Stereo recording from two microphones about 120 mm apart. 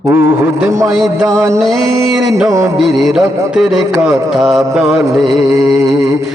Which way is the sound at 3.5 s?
5° right (ahead or behind).